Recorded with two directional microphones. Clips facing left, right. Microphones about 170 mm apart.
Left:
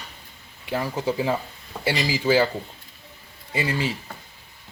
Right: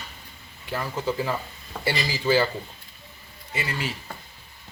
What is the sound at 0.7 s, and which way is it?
Speech, 15° left (ahead or behind).